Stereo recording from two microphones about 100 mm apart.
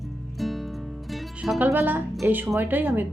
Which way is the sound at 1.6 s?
20° right (ahead or behind).